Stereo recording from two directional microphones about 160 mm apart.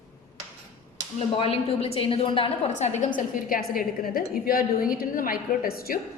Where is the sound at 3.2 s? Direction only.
60° left (ahead or behind).